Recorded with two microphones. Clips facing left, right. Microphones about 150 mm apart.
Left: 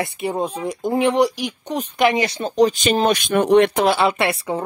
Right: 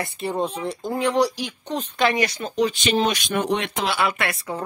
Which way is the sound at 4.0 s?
30° left (ahead or behind).